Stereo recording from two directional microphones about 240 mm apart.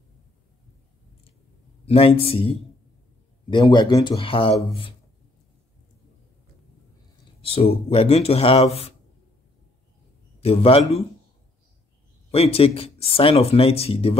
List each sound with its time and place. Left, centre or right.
1.9 s speech: left
7.4 s speech: left
10.4 s speech: left
12.3 s speech: left